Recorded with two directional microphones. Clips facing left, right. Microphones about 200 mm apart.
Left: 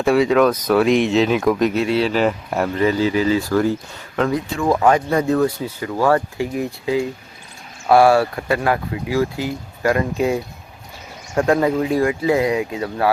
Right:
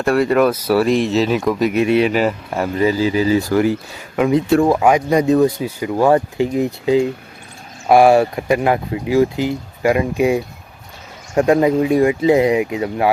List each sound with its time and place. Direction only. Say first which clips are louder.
0.0 s speech: even; centre (ahead or behind)
1.7 s speech: right 3 dB; 15° right (ahead or behind)
2.2 s speech: even; centre (ahead or behind)
2.7 s speech: right 2 dB; 10° right (ahead or behind)